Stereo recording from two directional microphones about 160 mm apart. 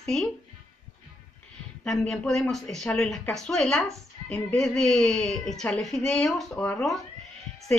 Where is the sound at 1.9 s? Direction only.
Centre (ahead or behind).